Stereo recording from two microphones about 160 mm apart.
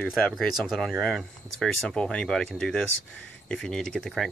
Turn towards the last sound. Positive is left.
turn(degrees=0)  # may be behind; listen again after turning